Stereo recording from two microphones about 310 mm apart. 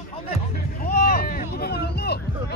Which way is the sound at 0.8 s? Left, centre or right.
Left.